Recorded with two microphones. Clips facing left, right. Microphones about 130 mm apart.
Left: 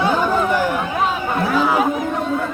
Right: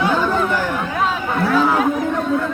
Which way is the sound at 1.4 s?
15° left (ahead or behind).